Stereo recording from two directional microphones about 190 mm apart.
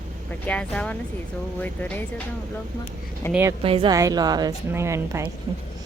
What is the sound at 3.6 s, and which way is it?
A woman's voice, 30° right (ahead or behind).